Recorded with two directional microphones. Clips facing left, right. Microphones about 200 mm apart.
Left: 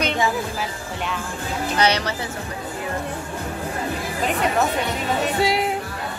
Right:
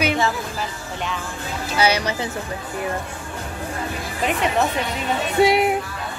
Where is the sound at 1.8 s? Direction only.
10° right (ahead or behind).